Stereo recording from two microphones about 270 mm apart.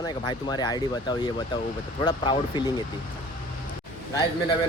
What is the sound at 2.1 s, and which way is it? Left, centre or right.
Speech, centre.